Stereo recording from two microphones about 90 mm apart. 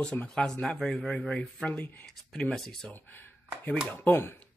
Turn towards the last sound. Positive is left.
turn(degrees=15)  # may be behind; listen again after turning